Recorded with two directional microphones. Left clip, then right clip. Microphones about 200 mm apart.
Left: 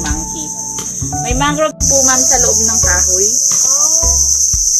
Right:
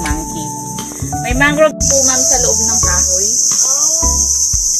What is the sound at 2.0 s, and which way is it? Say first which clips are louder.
Cricket: left 1 dB; 25° left (ahead or behind).